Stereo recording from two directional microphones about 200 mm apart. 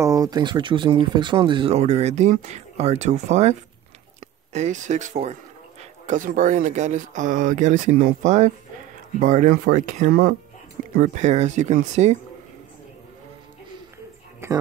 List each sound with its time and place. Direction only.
0.0 s a man's voice: 15° right (ahead or behind); by 12.2 s 35° right (ahead or behind)
14.4 s speech: 15° right (ahead or behind)